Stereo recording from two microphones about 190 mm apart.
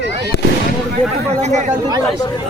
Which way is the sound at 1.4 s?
40° right (ahead or behind).